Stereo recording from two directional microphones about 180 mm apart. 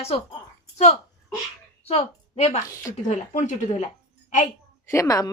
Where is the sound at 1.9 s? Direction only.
35° left (ahead or behind).